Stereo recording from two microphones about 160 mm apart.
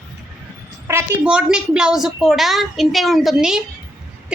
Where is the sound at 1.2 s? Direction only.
5° right (ahead or behind).